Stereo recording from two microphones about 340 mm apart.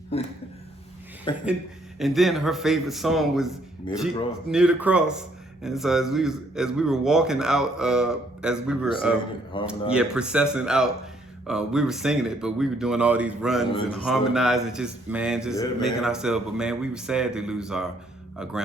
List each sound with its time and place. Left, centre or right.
0.1 s speech: centre
2.0 s a man's voice: centre
9.5 s speech: centre
9.9 s a man's voice: centre